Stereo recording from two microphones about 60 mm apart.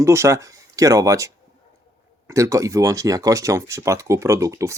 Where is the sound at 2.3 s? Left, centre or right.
Right.